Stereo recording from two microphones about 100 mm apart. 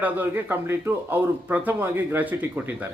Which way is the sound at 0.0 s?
15° right (ahead or behind).